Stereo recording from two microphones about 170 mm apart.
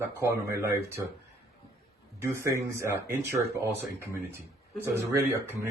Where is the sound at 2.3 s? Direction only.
15° right (ahead or behind).